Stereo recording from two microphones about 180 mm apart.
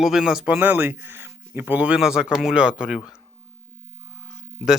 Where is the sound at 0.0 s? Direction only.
5° right (ahead or behind).